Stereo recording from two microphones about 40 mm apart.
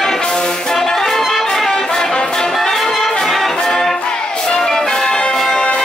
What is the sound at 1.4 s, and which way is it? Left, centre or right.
Music, centre.